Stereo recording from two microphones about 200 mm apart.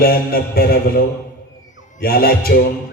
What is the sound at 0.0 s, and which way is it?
A man's voice, 50° left (ahead or behind).